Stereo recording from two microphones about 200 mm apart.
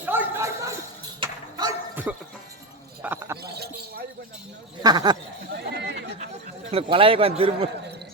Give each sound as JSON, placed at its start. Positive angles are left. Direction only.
{"t": 0.0, "sound": "bow-wow", "side_deg": -10}
{"t": 1.2, "sound": "dog", "side_deg": -20}
{"t": 2.1, "sound": "music", "side_deg": -5}
{"t": 3.0, "sound": "a sound", "side_deg": -10}
{"t": 4.8, "sound": "speech", "side_deg": -20}
{"t": 5.5, "sound": "chatter", "side_deg": -55}
{"t": 6.7, "sound": "a man's voice", "side_deg": -25}